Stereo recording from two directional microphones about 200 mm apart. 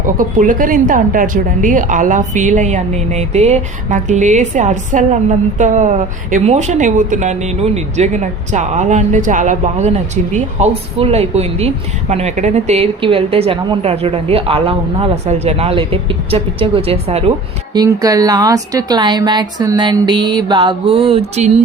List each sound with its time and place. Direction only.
0.0 s speech: 40° right (ahead or behind)
17.7 s speech: 20° right (ahead or behind)